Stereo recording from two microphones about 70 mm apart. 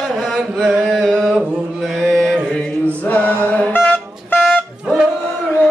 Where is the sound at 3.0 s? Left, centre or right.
Left.